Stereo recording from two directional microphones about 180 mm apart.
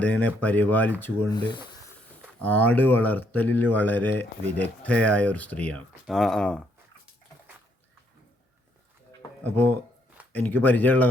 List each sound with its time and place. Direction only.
0.0 s speech: 10° left (ahead or behind)
1.4 s speech: 25° left (ahead or behind)
2.4 s speech: 10° left (ahead or behind)
10.3 s speech: 10° left (ahead or behind)